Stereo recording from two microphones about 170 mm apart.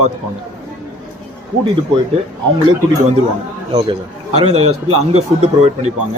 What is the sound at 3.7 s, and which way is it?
Speech, 35° right (ahead or behind).